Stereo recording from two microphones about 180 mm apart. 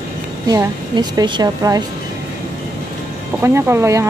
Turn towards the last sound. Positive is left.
turn(degrees=-15)  # may be behind; listen again after turning